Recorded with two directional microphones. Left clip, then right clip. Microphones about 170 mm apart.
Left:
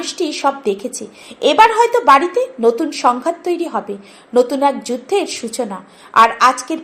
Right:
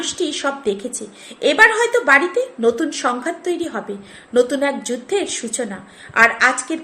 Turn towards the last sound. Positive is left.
turn(degrees=15)  # may be behind; listen again after turning